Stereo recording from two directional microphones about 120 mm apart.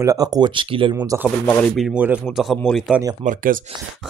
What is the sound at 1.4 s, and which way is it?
Speech, 15° left (ahead or behind).